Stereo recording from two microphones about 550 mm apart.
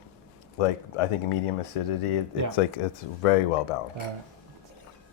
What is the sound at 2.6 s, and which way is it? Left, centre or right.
Speech, left.